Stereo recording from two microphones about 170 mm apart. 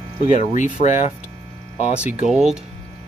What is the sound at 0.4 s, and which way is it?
Speech, 45° left (ahead or behind).